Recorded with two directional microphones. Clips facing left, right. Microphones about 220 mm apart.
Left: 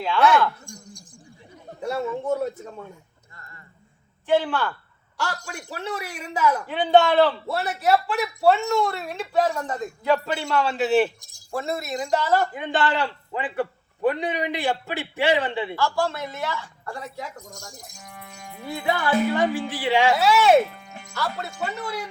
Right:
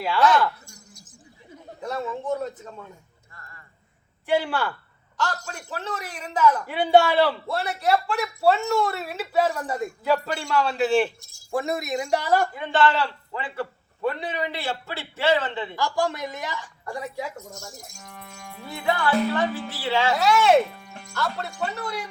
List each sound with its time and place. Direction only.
0.7 s a sound: 5° right (ahead or behind)
1.8 s a man's voice: 10° left (ahead or behind)
3.3 s a sound: 20° left (ahead or behind)
4.3 s a woman's voice: 10° right (ahead or behind)
5.1 s a man's voice: 10° left (ahead or behind)
6.7 s a woman's voice: 10° right (ahead or behind)
7.5 s speech: 5° left (ahead or behind)
11.5 s a woman's voice: 15° right (ahead or behind)
12.5 s a man's voice: 15° left (ahead or behind)
15.7 s a woman's voice: 15° right (ahead or behind)
17.3 s a man's voice: 15° left (ahead or behind)
18.0 s speech: centre (ahead or behind)
18.5 s a man's voice: 15° left (ahead or behind)